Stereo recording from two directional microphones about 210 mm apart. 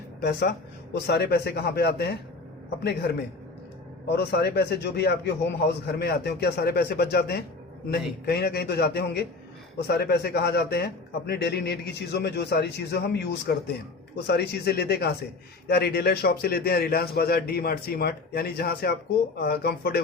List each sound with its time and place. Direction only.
0.2 s a man's voice: 50° left (ahead or behind)
4.1 s a man's voice: 50° left (ahead or behind)